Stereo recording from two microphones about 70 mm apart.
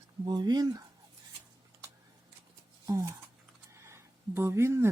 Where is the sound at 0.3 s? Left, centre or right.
Right.